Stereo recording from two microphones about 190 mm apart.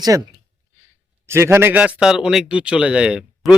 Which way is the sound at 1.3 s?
15° right (ahead or behind).